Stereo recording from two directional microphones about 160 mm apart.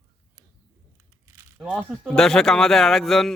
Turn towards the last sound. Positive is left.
turn(degrees=0)  # may be behind; listen again after turning